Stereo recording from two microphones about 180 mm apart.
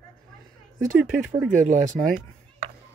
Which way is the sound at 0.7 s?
Centre (ahead or behind).